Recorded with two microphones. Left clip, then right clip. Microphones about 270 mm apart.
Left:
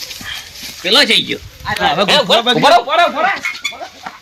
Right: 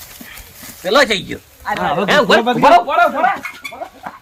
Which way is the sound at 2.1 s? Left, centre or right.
Left.